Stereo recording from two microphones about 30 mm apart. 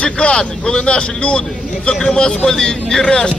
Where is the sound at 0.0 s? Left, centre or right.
Left.